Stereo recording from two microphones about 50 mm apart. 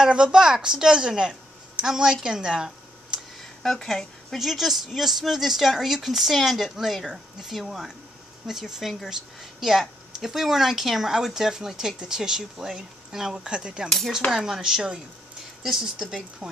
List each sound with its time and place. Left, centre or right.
0.0 s speech: centre
2.2 s a sound: centre
3.6 s a woman's voice: centre
13.8 s cutlery: centre
14.3 s speech: centre